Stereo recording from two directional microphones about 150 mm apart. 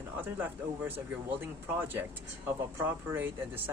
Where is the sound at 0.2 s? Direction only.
15° right (ahead or behind).